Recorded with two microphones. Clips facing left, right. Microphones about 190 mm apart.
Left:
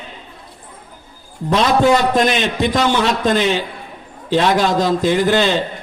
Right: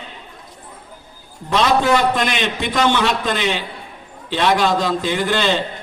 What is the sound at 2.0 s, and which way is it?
A man's voice, 45° left (ahead or behind).